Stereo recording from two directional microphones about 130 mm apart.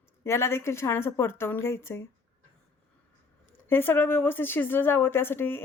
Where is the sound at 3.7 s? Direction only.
15° left (ahead or behind).